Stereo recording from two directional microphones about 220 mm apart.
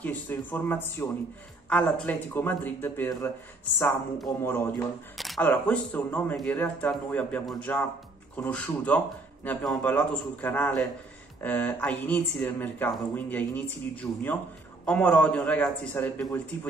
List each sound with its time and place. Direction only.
0.0 s speech: 5° left (ahead or behind)
5.1 s a man's voice: centre (ahead or behind)